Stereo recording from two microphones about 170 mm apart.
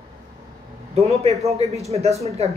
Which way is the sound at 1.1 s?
40° right (ahead or behind).